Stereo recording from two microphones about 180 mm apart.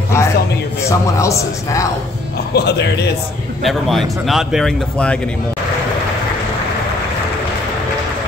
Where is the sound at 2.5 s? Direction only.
70° left (ahead or behind).